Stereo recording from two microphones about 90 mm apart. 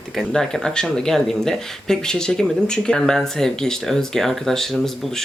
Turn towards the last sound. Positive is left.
turn(degrees=0)  # may be behind; listen again after turning